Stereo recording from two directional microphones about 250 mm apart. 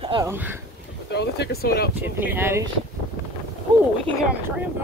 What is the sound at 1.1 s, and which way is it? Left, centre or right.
Speech, left.